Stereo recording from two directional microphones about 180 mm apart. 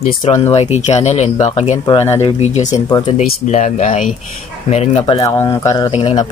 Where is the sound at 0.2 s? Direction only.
35° left (ahead or behind).